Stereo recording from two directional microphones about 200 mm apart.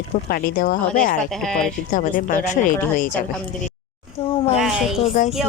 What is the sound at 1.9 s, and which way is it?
Speech, 40° left (ahead or behind).